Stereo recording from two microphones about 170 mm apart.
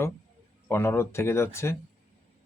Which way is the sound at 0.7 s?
15° left (ahead or behind).